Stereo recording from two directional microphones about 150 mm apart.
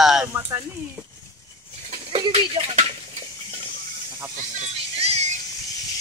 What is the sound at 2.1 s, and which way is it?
Speech, 40° right (ahead or behind).